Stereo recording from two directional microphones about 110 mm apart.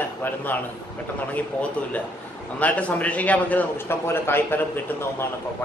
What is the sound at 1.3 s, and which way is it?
A man's voice, 15° left (ahead or behind).